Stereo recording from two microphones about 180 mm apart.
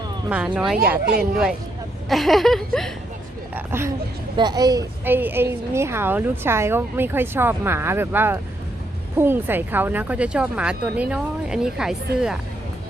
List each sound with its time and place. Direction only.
0.3 s speech: 5° right (ahead or behind)
2.0 s speech: centre (ahead or behind)
3.5 s a woman's voice: 15° right (ahead or behind)